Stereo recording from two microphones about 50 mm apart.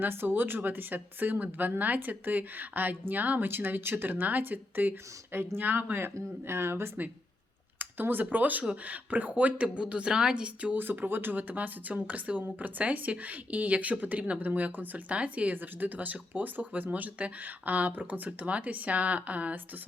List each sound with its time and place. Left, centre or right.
0.0 s speech: right
7.8 s a woman's voice: right
10.8 s speech: right
15.5 s speech: right